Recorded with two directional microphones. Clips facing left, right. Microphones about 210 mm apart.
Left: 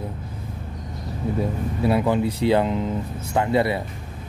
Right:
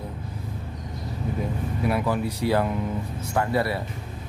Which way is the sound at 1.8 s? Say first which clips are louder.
Left 5 dB; 25° left (ahead or behind).